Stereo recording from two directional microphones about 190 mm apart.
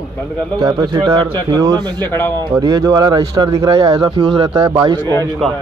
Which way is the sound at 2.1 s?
10° left (ahead or behind).